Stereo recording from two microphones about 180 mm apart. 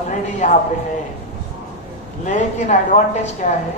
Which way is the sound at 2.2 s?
40° left (ahead or behind).